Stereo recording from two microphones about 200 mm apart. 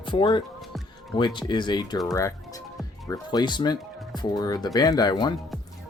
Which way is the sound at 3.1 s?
20° left (ahead or behind).